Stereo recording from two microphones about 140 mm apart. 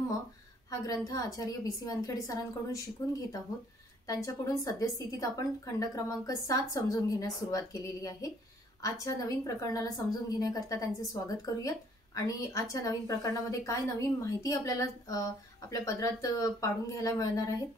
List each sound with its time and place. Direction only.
0.7 s a woman's voice: 25° left (ahead or behind)